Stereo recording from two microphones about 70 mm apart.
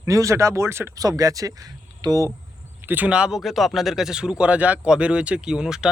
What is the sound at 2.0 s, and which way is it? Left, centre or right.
Speech, right.